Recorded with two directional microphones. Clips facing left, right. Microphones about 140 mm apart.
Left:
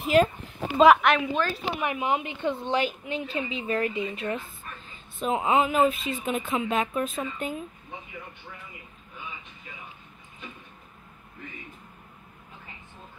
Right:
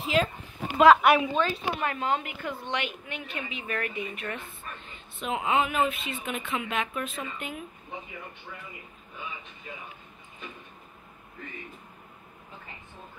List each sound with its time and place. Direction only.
0.0 s a sound: 50° left (ahead or behind)
1.0 s speech: 5° right (ahead or behind)
1.8 s speech: 10° left (ahead or behind)
2.2 s speech: 25° left (ahead or behind)